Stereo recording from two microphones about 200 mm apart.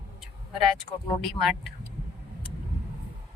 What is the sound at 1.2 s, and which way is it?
Speech, centre (ahead or behind).